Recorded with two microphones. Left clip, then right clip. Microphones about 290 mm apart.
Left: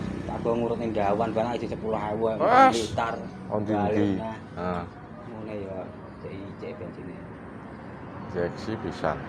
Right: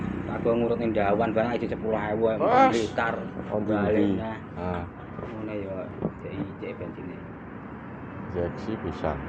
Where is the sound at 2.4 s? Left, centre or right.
Left.